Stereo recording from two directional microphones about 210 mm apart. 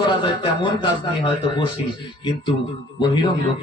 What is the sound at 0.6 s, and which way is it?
A man's voice, 20° left (ahead or behind).